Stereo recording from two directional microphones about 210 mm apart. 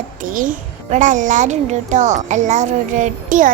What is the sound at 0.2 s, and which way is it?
A child's voice, 40° right (ahead or behind).